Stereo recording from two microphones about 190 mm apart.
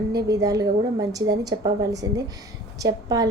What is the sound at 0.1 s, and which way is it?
A woman's voice, 20° right (ahead or behind).